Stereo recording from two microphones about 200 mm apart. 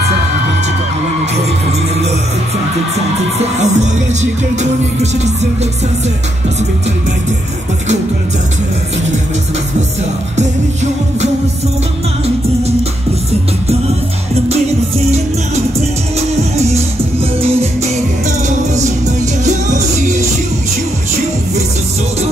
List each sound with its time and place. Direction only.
3.3 s music: 35° right (ahead or behind)
16.2 s music: 30° right (ahead or behind)
19.4 s music: 35° right (ahead or behind)